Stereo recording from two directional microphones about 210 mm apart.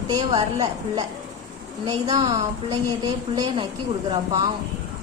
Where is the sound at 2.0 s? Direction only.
20° right (ahead or behind).